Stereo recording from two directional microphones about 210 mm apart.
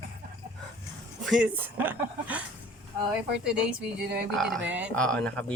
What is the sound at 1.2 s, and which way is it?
Speech, 5° right (ahead or behind).